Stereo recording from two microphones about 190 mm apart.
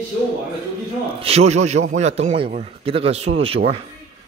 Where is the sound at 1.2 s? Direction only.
30° right (ahead or behind).